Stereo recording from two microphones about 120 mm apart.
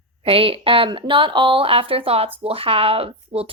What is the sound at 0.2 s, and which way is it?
Speech, 50° right (ahead or behind).